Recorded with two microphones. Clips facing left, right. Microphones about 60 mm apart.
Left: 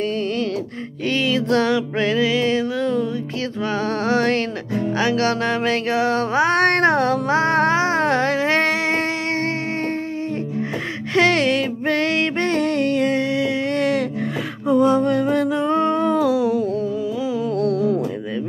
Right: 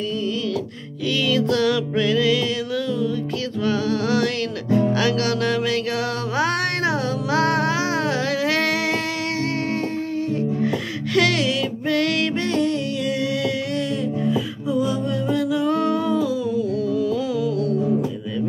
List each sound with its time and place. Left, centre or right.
1.2 s music: left
5.0 s a sound: left
6.6 s music: left
7.3 s music: left
11.1 s a sound: left
11.4 s music: left
14.7 s music: left
16.2 s music: left